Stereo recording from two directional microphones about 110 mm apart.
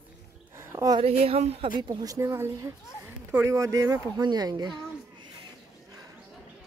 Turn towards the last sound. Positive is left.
turn(degrees=-40)  # may be behind; listen again after turning